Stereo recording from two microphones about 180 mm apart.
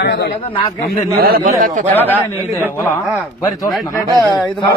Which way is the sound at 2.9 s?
20° left (ahead or behind).